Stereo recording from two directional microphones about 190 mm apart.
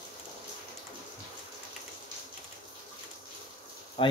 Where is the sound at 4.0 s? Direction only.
25° left (ahead or behind).